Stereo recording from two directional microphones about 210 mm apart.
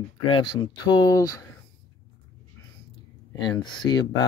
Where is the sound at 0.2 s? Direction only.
25° left (ahead or behind).